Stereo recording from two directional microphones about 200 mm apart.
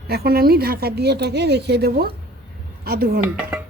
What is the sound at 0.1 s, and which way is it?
A woman's voice, 50° right (ahead or behind).